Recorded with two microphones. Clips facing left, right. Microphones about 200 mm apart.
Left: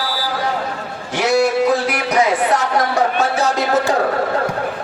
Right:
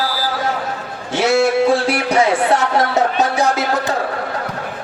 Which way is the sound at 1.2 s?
25° right (ahead or behind).